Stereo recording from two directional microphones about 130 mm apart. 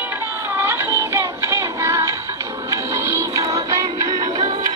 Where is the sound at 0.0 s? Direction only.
15° right (ahead or behind).